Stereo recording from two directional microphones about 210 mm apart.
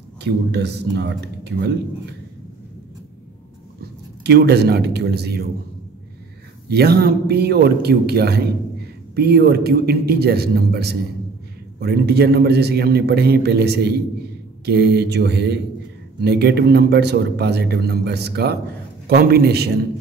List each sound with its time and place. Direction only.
0.2 s speech: 55° right (ahead or behind)
4.2 s speech: 50° right (ahead or behind)
6.7 s speech: 50° right (ahead or behind)